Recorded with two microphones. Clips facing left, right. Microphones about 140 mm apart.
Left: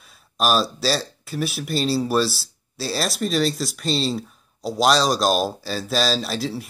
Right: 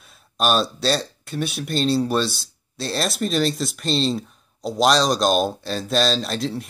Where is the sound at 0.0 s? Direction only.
Centre (ahead or behind).